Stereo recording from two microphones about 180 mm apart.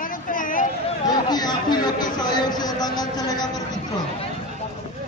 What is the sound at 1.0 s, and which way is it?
Chatter, 25° left (ahead or behind).